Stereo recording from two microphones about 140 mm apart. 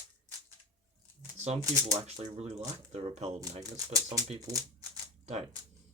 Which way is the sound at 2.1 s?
50° right (ahead or behind).